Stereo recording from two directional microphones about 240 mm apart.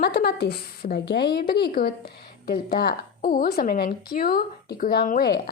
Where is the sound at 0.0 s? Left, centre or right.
Left.